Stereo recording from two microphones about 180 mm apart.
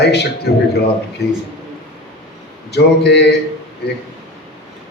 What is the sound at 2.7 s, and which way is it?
Speech, 70° left (ahead or behind).